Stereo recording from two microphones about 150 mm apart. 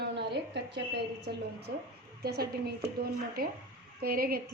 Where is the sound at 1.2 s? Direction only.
90° right.